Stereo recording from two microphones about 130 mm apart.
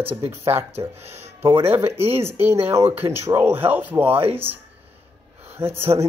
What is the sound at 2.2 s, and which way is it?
Speech, 20° right (ahead or behind).